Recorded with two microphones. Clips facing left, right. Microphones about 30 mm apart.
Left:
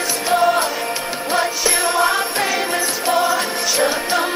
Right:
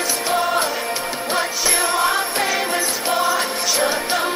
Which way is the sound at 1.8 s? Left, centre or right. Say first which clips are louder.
Left 2 dB; left.